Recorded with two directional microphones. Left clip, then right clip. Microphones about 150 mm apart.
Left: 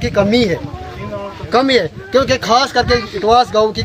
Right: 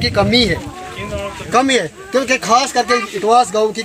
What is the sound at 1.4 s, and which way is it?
Speech, 45° left (ahead or behind).